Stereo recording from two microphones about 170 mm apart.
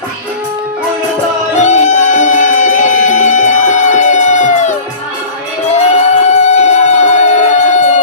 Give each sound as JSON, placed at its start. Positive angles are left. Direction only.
{"t": 1.5, "sound": "music", "side_deg": 45}